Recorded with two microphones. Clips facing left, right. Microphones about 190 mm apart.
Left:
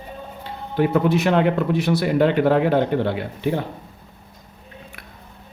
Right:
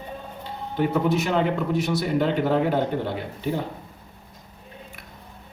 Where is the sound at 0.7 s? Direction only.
70° left (ahead or behind).